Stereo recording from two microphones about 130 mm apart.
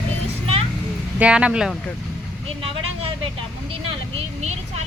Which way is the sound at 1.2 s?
10° right (ahead or behind).